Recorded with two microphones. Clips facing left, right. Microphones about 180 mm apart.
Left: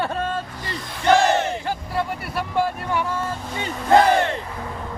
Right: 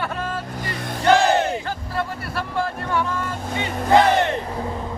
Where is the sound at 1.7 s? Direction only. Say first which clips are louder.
Left 2 dB; 15° left (ahead or behind).